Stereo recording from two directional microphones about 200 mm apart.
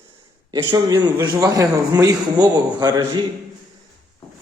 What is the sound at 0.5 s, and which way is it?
A man's voice, 20° right (ahead or behind).